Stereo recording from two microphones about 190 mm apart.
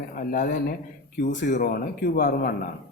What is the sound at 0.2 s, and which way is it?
Speech, 45° left (ahead or behind).